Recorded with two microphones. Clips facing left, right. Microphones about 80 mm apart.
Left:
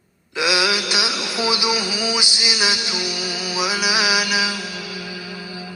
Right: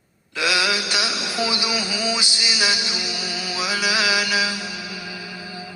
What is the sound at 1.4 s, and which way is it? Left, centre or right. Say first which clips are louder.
Music: left 3 dB; centre.